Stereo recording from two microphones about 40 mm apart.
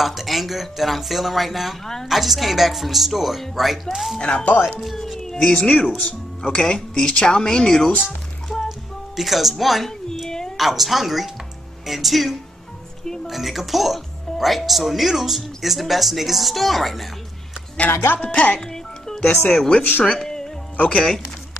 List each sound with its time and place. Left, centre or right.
0.0 s speech: centre
4.2 s speech: left
4.7 s speech: centre
5.6 s speech: left
8.6 s music: centre
10.6 s speech: centre
18.2 s speech: left
18.6 s music: centre
19.3 s speech: centre
19.8 s speech: left
20.1 s speech: centre
20.7 s speech: left